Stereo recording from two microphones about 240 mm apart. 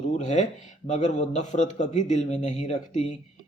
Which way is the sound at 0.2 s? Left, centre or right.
Left.